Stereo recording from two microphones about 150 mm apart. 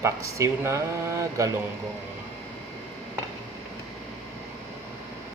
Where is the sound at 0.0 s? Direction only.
20° right (ahead or behind).